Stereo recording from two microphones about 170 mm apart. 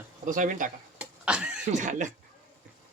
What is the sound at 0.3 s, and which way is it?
Speech, 50° right (ahead or behind).